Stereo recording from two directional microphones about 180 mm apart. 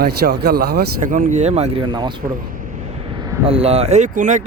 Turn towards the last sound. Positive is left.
turn(degrees=-45)  # may be behind; listen again after turning